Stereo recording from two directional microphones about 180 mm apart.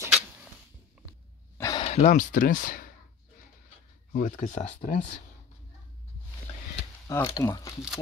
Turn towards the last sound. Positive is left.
turn(degrees=15)  # may be behind; listen again after turning